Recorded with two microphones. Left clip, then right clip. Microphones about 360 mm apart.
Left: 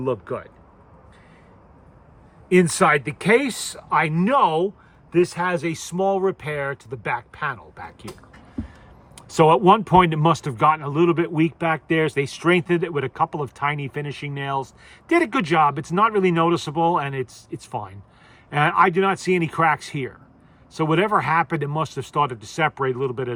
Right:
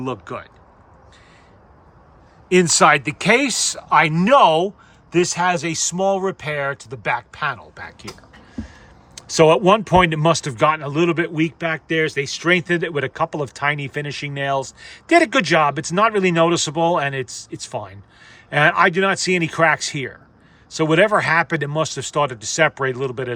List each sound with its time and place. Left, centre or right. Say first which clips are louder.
0.0 s speech: left 2 dB; centre
2.5 s speech: right 4 dB; centre
9.1 s speech: right 2 dB; centre